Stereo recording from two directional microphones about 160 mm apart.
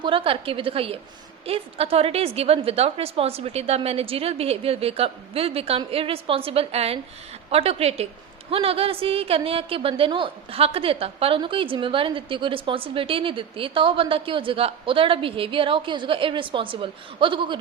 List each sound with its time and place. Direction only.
0.0 s a woman's voice: 35° right (ahead or behind)